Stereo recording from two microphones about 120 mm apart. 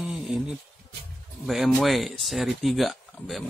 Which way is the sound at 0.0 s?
5° right (ahead or behind).